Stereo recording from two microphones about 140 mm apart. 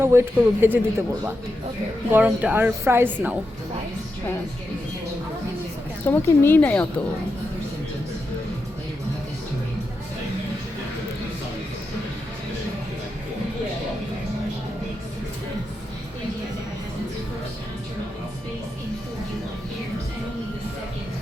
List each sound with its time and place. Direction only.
0.0 s a woman's voice: 15° right (ahead or behind)
2.0 s a woman's voice: 10° right (ahead or behind)
6.1 s a woman's voice: 15° left (ahead or behind)